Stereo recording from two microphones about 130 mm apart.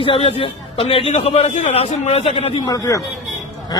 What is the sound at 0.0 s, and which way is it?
A man's voice, 45° left (ahead or behind).